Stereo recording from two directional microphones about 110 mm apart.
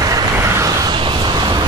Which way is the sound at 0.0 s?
35° right (ahead or behind).